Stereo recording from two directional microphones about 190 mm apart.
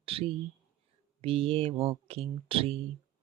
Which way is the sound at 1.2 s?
30° right (ahead or behind).